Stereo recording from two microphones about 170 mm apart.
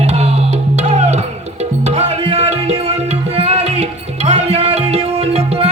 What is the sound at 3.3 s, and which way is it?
Tabla, 35° right (ahead or behind).